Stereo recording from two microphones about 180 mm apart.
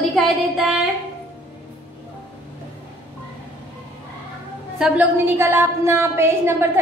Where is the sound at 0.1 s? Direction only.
Centre (ahead or behind).